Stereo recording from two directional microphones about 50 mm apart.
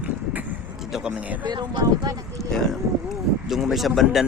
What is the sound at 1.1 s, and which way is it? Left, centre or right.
Speech, right.